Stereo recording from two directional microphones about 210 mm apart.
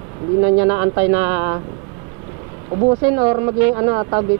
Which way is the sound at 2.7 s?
20° right (ahead or behind).